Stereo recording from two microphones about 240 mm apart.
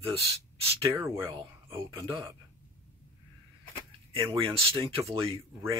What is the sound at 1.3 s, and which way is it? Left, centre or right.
Speech, right.